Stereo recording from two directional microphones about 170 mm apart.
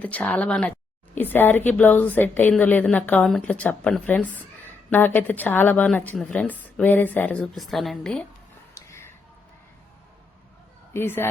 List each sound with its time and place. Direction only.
0.0 s speech: 10° left (ahead or behind)
8.7 s a sound: 15° left (ahead or behind)
10.9 s speech: 15° left (ahead or behind)